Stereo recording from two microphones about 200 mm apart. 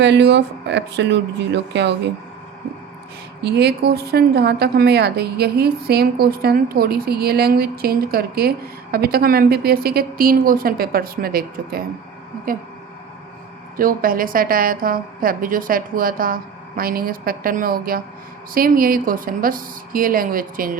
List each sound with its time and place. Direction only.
0.0 s speech: 60° right (ahead or behind)
3.4 s a woman's voice: 55° right (ahead or behind)
13.7 s a woman's voice: 45° right (ahead or behind)